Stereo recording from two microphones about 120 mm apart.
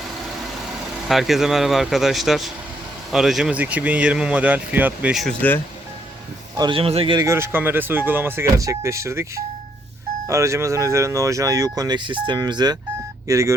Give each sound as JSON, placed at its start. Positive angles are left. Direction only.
{"t": 1.0, "sound": "speech", "side_deg": 0}
{"t": 5.4, "sound": "speech", "side_deg": 15}
{"t": 6.6, "sound": "speech", "side_deg": -45}
{"t": 7.2, "sound": "speech", "side_deg": -20}
{"t": 13.2, "sound": "speech", "side_deg": -25}